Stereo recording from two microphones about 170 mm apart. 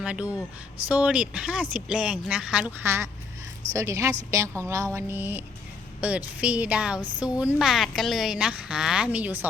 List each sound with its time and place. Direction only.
0.0 s a woman's voice: 5° right (ahead or behind)